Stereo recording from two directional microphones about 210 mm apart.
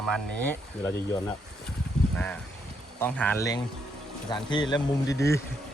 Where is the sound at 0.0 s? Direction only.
5° left (ahead or behind).